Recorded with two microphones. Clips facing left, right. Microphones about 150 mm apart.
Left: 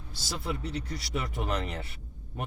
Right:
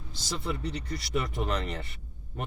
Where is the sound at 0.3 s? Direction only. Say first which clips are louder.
Right 1 dB; 5° left (ahead or behind).